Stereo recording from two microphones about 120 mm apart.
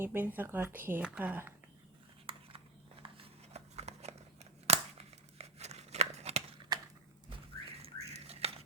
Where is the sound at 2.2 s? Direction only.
50° right (ahead or behind).